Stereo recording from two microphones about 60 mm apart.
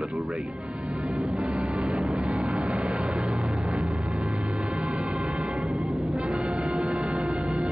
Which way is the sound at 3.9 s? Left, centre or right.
Centre.